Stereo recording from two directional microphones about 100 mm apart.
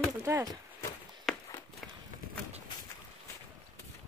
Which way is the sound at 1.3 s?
Centre (ahead or behind).